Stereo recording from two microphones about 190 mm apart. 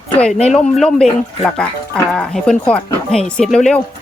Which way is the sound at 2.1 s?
5° left (ahead or behind).